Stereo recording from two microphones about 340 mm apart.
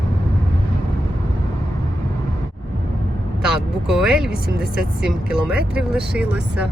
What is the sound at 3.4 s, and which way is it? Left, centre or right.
Speech, centre.